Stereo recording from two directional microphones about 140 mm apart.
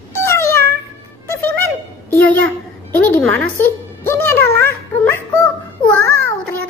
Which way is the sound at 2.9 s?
15° left (ahead or behind).